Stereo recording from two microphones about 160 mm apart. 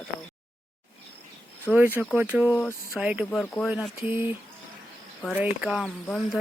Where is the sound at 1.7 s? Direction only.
10° right (ahead or behind).